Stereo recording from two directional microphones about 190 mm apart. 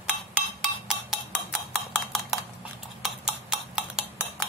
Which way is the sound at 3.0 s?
5° right (ahead or behind).